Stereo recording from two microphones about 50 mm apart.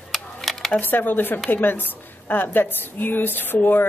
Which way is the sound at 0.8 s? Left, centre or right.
Left.